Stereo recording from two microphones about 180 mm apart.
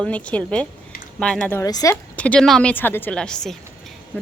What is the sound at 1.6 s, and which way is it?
Speech, 20° left (ahead or behind).